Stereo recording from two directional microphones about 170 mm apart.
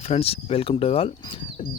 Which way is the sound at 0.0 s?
35° left (ahead or behind).